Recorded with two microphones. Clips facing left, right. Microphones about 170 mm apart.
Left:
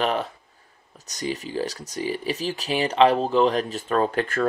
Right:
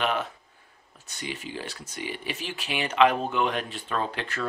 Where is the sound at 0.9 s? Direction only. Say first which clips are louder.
Left 7 dB; 40° left (ahead or behind).